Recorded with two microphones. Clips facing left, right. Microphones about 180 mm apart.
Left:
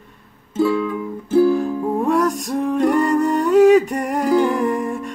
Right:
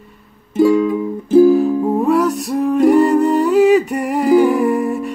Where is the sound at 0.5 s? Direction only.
15° right (ahead or behind).